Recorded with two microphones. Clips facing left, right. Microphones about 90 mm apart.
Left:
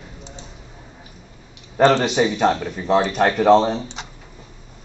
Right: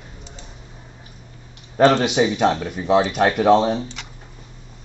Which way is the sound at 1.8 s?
5° right (ahead or behind).